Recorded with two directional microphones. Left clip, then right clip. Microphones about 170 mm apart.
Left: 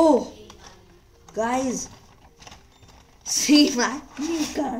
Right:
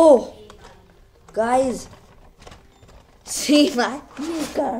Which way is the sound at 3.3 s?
15° left (ahead or behind).